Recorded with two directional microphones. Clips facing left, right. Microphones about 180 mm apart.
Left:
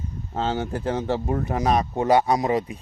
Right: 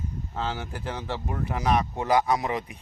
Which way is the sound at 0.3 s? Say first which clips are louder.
Left 7 dB; 35° left (ahead or behind).